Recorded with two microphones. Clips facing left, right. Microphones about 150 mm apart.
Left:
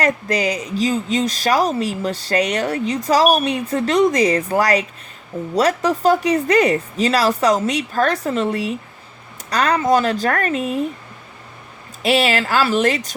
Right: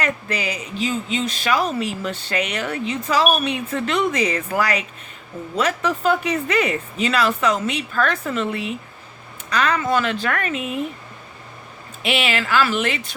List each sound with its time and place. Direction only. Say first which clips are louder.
0.0 s speech: left 6 dB; 35° left (ahead or behind)
12.0 s speech: left 5 dB; 35° left (ahead or behind)